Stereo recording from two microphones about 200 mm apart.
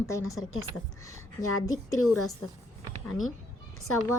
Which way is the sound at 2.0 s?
90° left.